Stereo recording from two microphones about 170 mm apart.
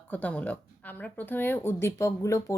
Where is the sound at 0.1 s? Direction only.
10° left (ahead or behind).